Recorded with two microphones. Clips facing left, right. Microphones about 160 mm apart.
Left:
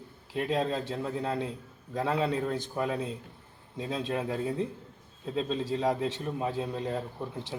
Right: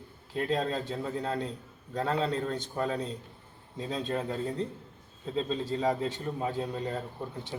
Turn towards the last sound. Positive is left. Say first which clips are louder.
# left 2 dB
turn(degrees=5)  # may be behind; listen again after turning